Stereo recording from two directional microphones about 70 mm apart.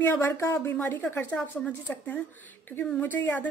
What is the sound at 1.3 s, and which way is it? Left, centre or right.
A woman's voice, centre.